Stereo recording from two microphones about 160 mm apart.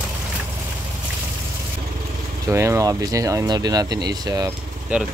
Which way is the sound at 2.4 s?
20° right (ahead or behind).